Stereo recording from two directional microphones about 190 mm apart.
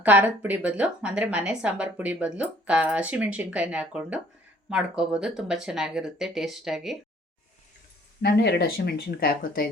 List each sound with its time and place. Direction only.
0.0 s a woman's voice: 10° right (ahead or behind)
8.2 s speech: 60° left (ahead or behind)